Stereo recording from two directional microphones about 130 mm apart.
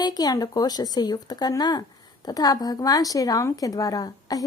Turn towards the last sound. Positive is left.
turn(degrees=30)  # may be behind; listen again after turning